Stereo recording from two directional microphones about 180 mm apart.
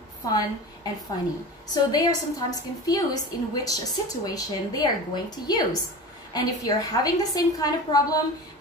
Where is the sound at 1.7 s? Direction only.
20° left (ahead or behind).